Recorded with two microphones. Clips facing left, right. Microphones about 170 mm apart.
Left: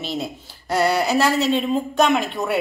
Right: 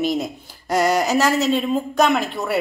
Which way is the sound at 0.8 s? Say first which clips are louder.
Right 1 dB; 40° right (ahead or behind).